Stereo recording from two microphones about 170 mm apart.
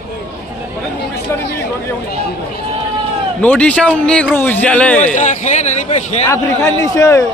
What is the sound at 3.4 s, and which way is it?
A man's voice, 10° left (ahead or behind).